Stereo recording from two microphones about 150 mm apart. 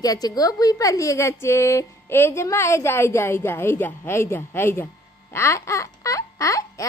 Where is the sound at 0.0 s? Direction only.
25° left (ahead or behind).